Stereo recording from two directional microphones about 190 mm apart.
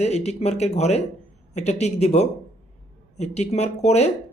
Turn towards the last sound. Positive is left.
turn(degrees=35)  # may be behind; listen again after turning